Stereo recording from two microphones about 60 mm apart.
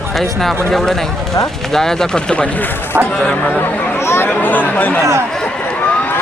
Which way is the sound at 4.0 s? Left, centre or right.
Left.